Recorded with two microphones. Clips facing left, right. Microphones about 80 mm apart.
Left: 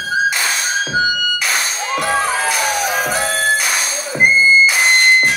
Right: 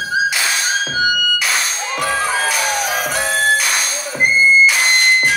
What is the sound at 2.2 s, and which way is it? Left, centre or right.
Music, centre.